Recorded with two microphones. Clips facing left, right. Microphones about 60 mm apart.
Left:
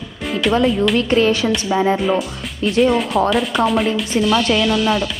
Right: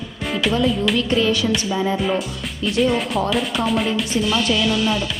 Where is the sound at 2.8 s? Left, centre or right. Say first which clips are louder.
Left 4 dB; centre.